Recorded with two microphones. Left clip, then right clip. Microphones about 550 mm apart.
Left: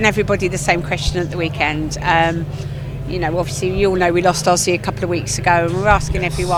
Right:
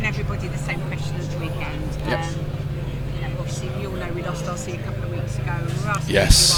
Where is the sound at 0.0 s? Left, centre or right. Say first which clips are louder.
Left 12 dB; left.